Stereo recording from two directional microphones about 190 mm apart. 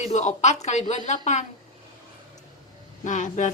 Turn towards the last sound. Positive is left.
turn(degrees=40)  # may be behind; listen again after turning